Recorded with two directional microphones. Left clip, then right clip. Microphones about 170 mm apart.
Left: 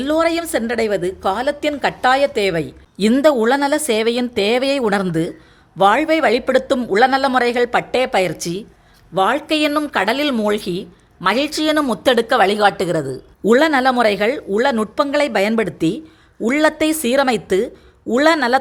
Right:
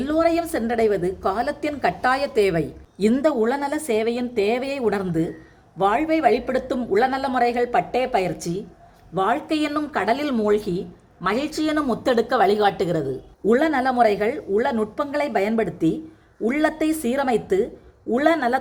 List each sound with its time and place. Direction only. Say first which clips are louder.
0.0 s a woman's voice: left 3 dB; 40° left (ahead or behind)